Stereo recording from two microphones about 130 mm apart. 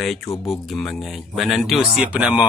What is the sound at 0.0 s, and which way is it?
Speech, centre (ahead or behind).